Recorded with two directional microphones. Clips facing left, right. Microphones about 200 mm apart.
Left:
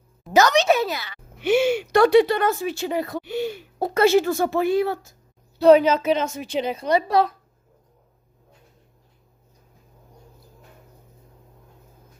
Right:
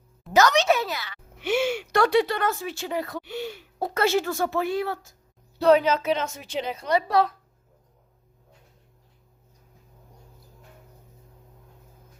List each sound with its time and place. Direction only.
0.3 s a woman's voice: 15° left (ahead or behind)